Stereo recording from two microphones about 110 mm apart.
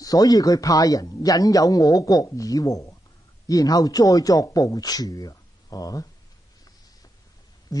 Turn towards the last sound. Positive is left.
turn(degrees=35)  # may be behind; listen again after turning